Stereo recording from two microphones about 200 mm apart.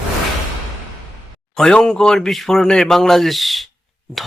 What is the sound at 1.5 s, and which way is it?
Speech, 5° left (ahead or behind).